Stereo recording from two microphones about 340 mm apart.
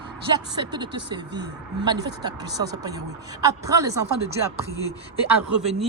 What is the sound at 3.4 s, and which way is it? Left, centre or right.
Speech, centre.